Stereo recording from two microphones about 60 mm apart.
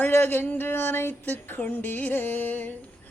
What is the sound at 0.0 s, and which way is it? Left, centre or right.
Female singing, left.